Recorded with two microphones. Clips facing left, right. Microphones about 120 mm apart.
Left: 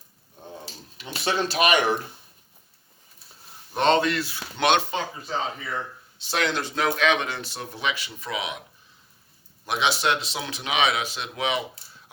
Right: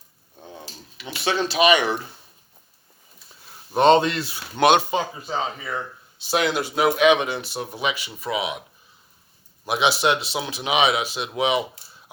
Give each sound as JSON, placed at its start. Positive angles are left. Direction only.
{"t": 1.5, "sound": "speech", "side_deg": 45}
{"t": 3.7, "sound": "speech", "side_deg": -15}
{"t": 4.6, "sound": "speech", "side_deg": -10}
{"t": 9.6, "sound": "speech", "side_deg": -10}